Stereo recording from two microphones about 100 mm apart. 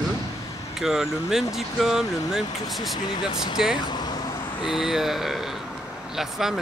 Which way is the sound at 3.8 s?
45° left (ahead or behind).